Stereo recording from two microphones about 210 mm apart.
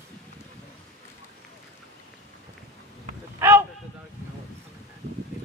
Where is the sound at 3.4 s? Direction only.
10° right (ahead or behind).